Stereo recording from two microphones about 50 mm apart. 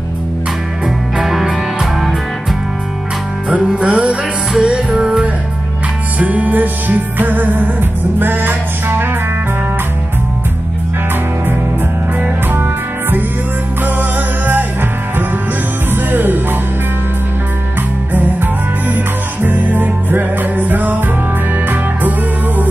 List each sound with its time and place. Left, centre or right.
0.8 s music: centre
3.4 s music: right
6.1 s music: right
13.8 s music: right
15.9 s music: right
18.1 s music: right